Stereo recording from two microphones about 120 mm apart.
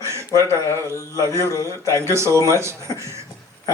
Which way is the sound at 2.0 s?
25° right (ahead or behind).